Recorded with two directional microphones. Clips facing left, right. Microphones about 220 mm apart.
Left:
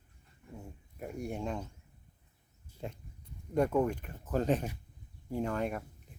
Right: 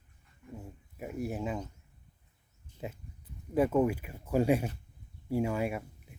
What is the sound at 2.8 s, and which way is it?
Speech, 5° right (ahead or behind).